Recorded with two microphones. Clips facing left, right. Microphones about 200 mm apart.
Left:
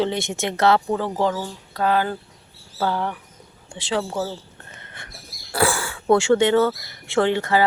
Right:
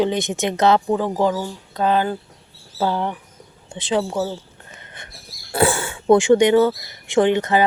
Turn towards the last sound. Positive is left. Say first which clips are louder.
# right 3 dB
turn(degrees=-20)  # may be behind; listen again after turning